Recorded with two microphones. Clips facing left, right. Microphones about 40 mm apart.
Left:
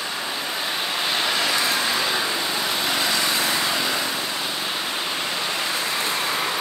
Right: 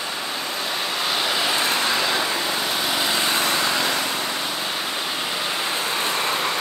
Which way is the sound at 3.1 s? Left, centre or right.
Right.